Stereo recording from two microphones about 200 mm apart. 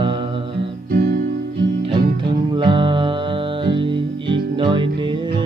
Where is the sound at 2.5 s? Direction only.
25° right (ahead or behind).